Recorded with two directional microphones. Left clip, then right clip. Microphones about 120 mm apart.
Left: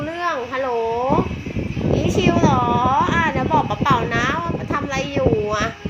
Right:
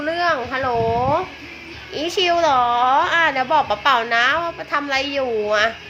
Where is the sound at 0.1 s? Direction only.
25° right (ahead or behind).